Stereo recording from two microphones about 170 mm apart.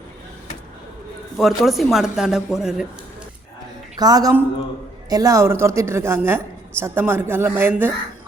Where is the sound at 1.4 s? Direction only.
Centre (ahead or behind).